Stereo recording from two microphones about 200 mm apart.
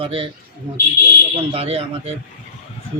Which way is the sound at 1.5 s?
30° right (ahead or behind).